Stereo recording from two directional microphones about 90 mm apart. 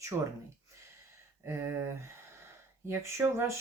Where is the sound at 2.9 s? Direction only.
30° right (ahead or behind).